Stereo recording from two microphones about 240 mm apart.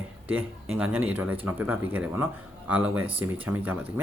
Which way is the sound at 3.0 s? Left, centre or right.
Right.